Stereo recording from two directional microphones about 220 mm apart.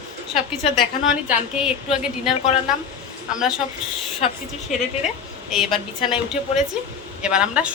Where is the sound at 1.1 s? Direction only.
5° right (ahead or behind).